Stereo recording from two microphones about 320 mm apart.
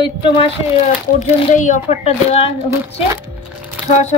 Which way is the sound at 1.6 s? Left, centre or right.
Left.